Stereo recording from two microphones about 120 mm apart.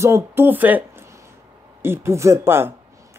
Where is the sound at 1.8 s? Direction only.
20° right (ahead or behind).